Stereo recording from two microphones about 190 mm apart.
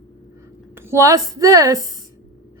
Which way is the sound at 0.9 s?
15° right (ahead or behind).